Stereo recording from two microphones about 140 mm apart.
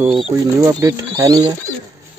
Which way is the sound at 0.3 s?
25° right (ahead or behind).